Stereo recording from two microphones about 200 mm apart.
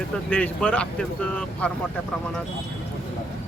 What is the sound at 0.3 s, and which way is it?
Speech, 5° left (ahead or behind).